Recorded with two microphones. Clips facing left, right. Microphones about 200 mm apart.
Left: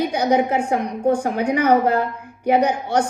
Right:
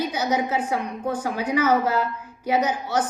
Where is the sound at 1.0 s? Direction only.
60° left (ahead or behind).